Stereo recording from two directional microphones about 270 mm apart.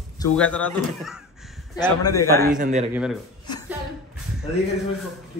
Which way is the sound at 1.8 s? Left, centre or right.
Centre.